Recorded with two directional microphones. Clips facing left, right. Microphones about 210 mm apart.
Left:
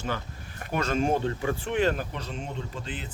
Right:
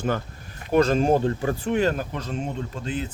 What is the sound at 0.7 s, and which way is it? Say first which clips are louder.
Speech: right 7 dB; 35° right (ahead or behind).